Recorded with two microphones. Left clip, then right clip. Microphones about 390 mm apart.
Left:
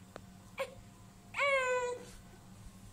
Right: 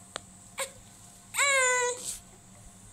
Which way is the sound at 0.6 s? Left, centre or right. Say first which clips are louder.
Right 3 dB; centre.